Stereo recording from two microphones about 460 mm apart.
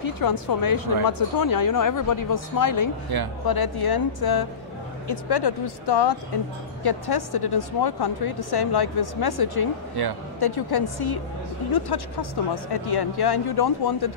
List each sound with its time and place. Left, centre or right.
0.0 s speech: left